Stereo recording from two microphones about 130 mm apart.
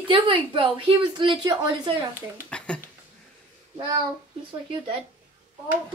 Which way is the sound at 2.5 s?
10° left (ahead or behind).